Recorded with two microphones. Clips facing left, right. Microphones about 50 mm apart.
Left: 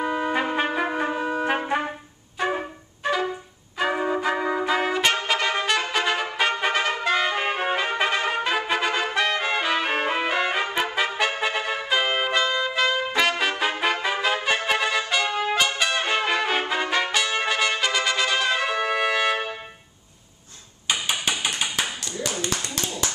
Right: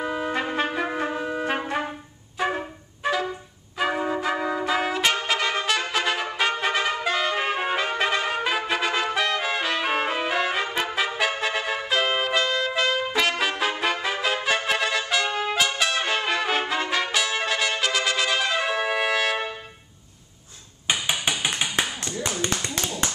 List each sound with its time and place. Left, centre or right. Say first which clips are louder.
0.0 s trumpet: left 2 dB; centre
2.4 s wind instrument: even; centre
3.0 s music: left 1 dB; centre
3.7 s trumpet: left 1 dB; centre
21.3 s a sound: right 1 dB; centre
22.4 s clapping: right 1 dB; right